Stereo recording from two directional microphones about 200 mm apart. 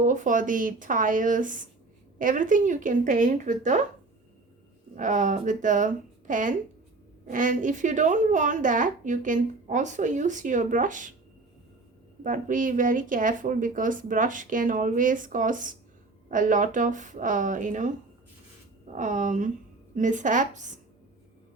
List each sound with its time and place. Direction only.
0.0 s a woman's voice: 40° right (ahead or behind)
4.9 s a woman's voice: 40° right (ahead or behind)
12.2 s a woman's voice: 40° right (ahead or behind)
18.9 s a woman's voice: 40° right (ahead or behind)